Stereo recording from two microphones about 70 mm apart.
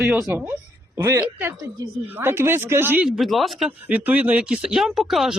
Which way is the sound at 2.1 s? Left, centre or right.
Right.